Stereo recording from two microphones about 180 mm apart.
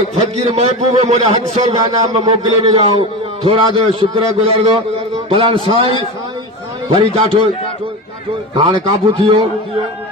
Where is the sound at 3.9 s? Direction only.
30° right (ahead or behind).